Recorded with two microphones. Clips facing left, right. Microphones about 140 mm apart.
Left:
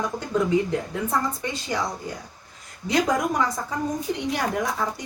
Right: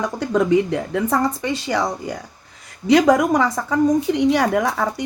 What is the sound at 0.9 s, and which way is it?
Speech, 90° right.